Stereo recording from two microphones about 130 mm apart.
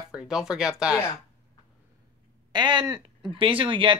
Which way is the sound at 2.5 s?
35° right (ahead or behind).